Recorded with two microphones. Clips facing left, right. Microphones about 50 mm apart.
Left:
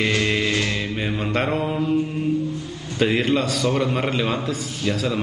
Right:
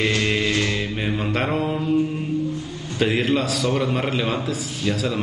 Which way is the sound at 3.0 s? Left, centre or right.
Centre.